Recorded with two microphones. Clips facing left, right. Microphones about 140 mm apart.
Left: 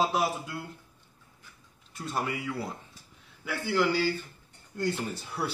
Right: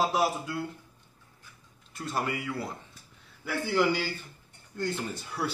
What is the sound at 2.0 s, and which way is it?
Speech, centre (ahead or behind).